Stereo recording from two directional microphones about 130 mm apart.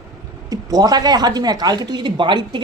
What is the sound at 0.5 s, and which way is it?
Speech, 30° right (ahead or behind).